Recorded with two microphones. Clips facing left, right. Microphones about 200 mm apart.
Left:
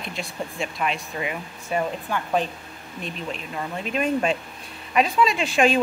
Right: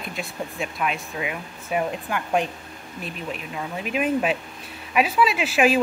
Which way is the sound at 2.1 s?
15° right (ahead or behind).